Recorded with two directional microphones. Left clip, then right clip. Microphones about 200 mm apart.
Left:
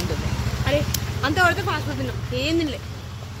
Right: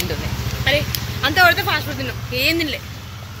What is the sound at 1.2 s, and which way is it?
Speech, 20° left (ahead or behind).